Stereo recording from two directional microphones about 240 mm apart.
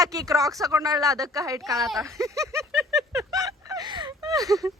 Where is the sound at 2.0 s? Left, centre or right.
Centre.